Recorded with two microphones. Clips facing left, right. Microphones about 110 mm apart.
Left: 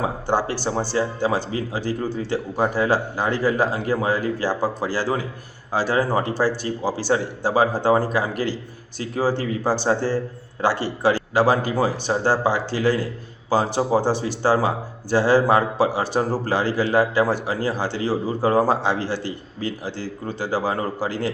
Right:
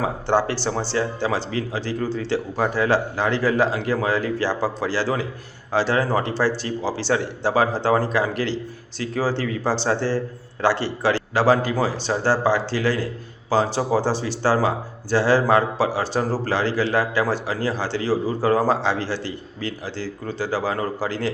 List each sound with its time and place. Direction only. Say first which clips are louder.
0.5 s a man's voice: left 1 dB; 15° left (ahead or behind)